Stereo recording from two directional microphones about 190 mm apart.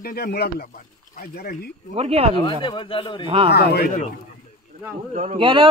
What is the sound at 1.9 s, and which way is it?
Speech, 30° right (ahead or behind).